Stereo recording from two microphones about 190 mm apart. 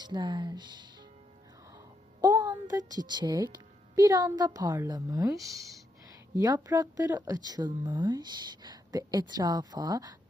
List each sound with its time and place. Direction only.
0.0 s speech: 25° right (ahead or behind)
2.2 s a sound: 20° right (ahead or behind)
2.6 s speech: 20° right (ahead or behind)